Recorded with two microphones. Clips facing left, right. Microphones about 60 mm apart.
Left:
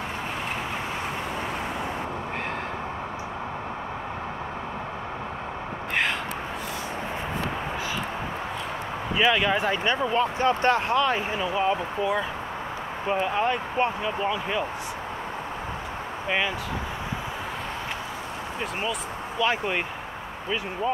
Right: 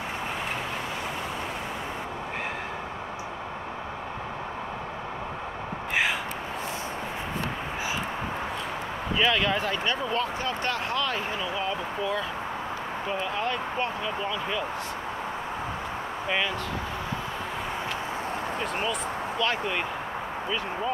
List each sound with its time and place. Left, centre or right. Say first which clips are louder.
9.2 s speech: left 3 dB; centre
10.4 s speech: left 7 dB; left
19.4 s speech: left 4 dB; centre